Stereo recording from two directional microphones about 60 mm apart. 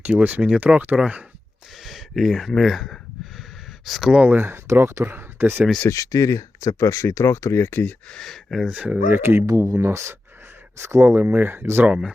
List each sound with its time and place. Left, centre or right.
0.0 s speech: right
1.8 s a sound: centre
3.8 s speech: centre
4.3 s speech: right
5.9 s speech: left
8.1 s speech: centre
8.6 s speech: right
9.0 s speech: right
9.5 s speech: right
11.9 s speech: centre